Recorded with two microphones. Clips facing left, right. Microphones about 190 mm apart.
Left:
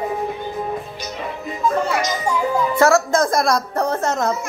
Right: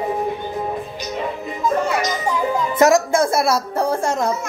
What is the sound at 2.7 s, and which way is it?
Speech, 15° right (ahead or behind).